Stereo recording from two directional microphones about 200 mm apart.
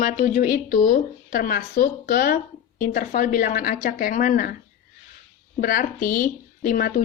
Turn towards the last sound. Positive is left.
turn(degrees=45)  # may be behind; listen again after turning